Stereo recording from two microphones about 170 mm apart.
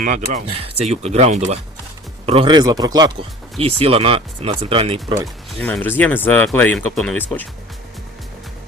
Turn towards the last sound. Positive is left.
turn(degrees=10)  # may be behind; listen again after turning